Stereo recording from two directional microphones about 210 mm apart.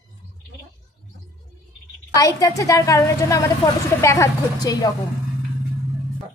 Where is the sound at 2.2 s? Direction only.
15° left (ahead or behind).